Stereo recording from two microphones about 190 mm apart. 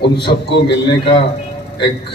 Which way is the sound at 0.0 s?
60° left (ahead or behind).